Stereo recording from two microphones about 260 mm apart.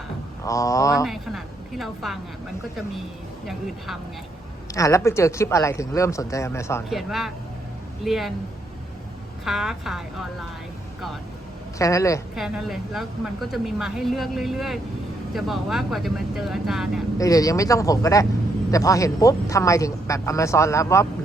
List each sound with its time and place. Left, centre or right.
0.4 s speech: centre
1.0 s a woman's voice: centre
4.7 s speech: centre
6.9 s a woman's voice: centre
9.4 s a woman's voice: centre
11.8 s speech: centre
12.4 s a woman's voice: centre
17.2 s speech: centre